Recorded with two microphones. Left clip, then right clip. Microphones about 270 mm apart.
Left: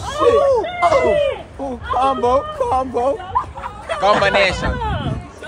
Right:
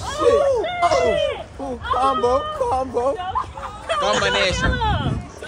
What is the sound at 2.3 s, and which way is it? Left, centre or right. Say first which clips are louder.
Speech: left 3 dB; left.